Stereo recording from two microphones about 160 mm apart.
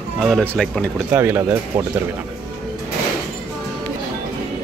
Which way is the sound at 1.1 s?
15° right (ahead or behind).